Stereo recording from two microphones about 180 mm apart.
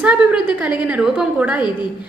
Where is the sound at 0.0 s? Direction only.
5° right (ahead or behind).